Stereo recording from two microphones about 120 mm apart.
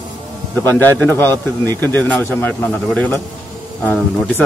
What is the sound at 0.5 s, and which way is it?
A man's voice, 15° left (ahead or behind).